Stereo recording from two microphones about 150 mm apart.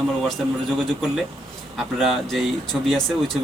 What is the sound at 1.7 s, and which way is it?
Speech, centre (ahead or behind).